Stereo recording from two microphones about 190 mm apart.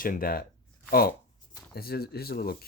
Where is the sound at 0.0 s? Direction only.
50° left (ahead or behind).